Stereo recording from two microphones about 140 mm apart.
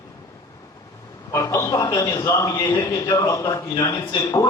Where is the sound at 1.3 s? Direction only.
20° left (ahead or behind).